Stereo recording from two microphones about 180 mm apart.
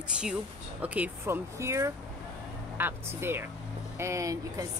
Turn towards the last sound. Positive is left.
turn(degrees=-20)  # may be behind; listen again after turning